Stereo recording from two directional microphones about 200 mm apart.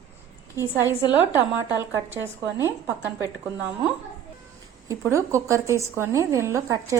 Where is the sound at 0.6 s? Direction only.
10° right (ahead or behind).